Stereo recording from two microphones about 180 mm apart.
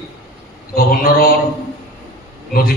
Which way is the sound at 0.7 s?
55° left (ahead or behind).